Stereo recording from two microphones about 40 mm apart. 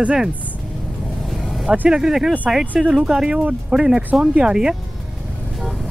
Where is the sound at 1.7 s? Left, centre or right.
Centre.